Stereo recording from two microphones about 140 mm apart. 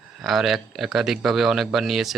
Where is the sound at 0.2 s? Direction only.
Centre (ahead or behind).